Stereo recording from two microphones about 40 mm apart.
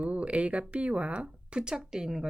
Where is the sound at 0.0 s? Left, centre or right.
Right.